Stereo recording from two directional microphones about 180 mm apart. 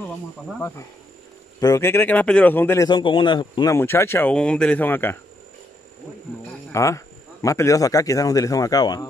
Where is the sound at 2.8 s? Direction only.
25° left (ahead or behind).